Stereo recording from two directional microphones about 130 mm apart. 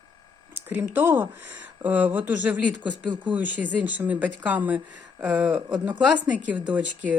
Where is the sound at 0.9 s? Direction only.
15° right (ahead or behind).